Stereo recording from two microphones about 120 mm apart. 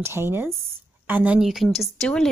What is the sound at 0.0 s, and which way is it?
A woman's voice, 20° right (ahead or behind).